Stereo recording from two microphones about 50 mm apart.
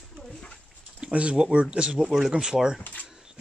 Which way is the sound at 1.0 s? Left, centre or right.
Right.